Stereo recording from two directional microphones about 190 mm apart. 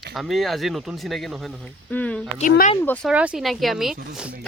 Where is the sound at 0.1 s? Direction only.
Centre (ahead or behind).